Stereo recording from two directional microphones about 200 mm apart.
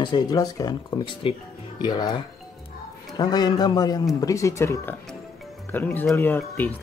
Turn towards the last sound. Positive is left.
turn(degrees=10)  # may be behind; listen again after turning